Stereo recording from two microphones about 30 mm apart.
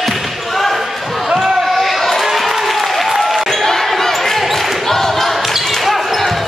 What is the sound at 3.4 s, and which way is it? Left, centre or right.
Basketball bounce, centre.